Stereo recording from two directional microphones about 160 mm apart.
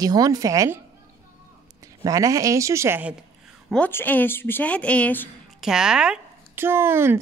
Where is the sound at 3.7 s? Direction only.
10° left (ahead or behind).